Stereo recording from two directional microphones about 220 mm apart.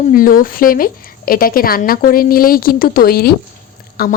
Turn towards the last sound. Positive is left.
turn(degrees=45)  # may be behind; listen again after turning